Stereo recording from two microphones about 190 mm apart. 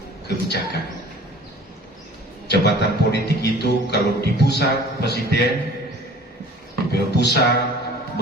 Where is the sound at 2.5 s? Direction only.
60° left (ahead or behind).